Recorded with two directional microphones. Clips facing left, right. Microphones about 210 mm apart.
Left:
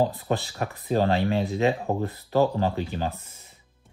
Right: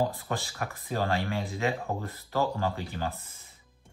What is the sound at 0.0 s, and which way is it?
Speech, 20° left (ahead or behind).